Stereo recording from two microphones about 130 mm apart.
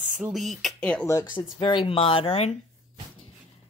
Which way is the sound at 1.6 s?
40° left (ahead or behind).